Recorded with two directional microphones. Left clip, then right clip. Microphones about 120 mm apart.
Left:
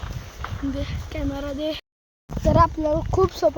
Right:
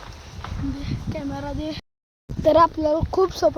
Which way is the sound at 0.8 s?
15° right (ahead or behind).